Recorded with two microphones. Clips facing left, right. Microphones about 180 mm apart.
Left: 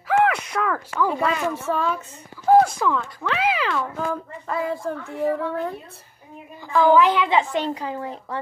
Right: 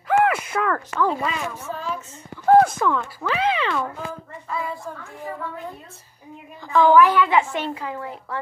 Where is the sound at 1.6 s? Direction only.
70° left (ahead or behind).